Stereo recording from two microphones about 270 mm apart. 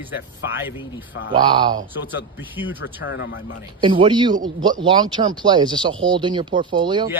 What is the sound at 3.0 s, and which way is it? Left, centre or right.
Speech, left.